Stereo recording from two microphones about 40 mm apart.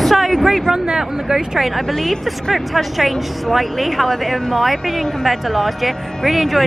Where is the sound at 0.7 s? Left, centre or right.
Centre.